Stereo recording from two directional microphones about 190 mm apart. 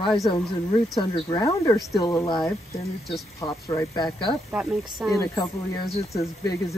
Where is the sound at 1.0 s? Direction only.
20° left (ahead or behind).